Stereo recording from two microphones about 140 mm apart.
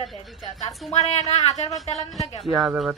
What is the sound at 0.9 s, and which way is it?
Speech, 50° left (ahead or behind).